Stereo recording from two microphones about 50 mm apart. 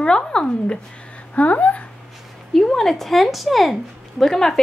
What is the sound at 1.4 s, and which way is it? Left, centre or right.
Speech, left.